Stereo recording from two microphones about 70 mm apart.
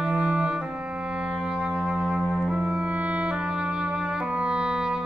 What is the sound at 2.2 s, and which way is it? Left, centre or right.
Music, left.